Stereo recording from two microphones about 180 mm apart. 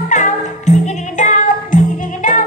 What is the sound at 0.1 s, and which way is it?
Music, 40° left (ahead or behind).